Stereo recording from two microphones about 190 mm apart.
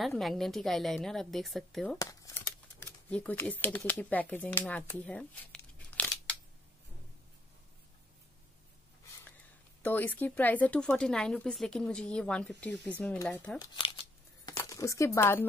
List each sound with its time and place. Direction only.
0.0 s a woman's voice: centre (ahead or behind)
2.0 s speech: 15° left (ahead or behind)
9.8 s speech: 10° left (ahead or behind)
13.6 s crumpling: 25° left (ahead or behind)
14.5 s speech: 15° left (ahead or behind)